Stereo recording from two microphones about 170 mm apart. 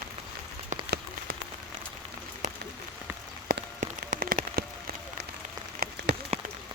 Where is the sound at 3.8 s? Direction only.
50° right (ahead or behind).